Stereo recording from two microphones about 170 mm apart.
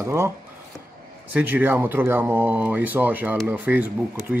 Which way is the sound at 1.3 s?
10° right (ahead or behind).